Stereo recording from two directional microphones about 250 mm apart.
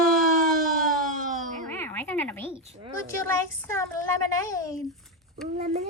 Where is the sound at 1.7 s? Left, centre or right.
Centre.